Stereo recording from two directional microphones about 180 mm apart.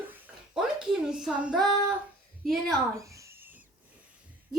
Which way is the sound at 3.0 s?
15° right (ahead or behind).